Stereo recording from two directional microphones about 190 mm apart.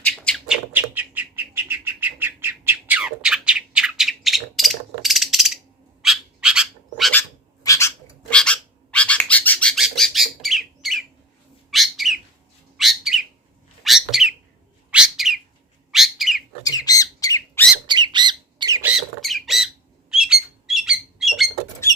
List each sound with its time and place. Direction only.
0.0 s bird: 5° left (ahead or behind)
7.2 s a sound: 15° left (ahead or behind)
8.4 s bird: 5° left (ahead or behind)
16.6 s squawk: 20° left (ahead or behind)
17.8 s squawk: 25° right (ahead or behind)
18.8 s squawk: centre (ahead or behind)